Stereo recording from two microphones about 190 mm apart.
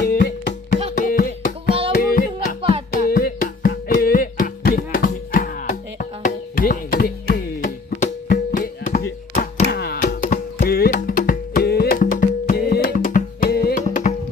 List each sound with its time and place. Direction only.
0.0 s music: 40° left (ahead or behind)
9.3 s a sound: 40° left (ahead or behind)
9.7 s music: 55° left (ahead or behind)
13.8 s music: 40° left (ahead or behind)